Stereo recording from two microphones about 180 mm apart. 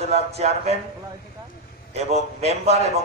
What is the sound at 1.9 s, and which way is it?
A man's voice, 35° right (ahead or behind).